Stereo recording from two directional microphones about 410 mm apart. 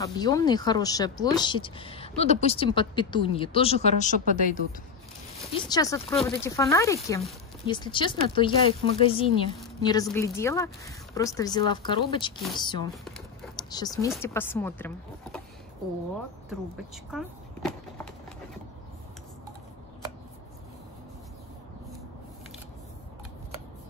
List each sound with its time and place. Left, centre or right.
0.0 s speech: centre
16.4 s speech: centre